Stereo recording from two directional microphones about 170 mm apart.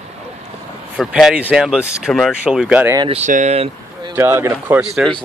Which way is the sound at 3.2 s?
45° right (ahead or behind).